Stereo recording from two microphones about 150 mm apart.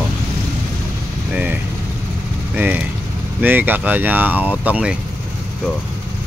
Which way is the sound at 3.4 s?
10° right (ahead or behind).